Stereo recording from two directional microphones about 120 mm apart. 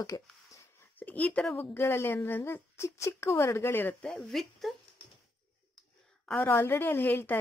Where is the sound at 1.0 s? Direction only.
15° left (ahead or behind).